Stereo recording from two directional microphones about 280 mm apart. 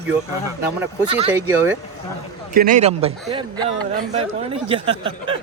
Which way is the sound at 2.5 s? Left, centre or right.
Right.